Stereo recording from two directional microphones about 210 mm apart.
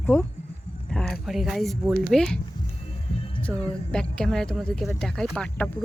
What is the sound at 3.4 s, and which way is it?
A woman's voice, 5° left (ahead or behind).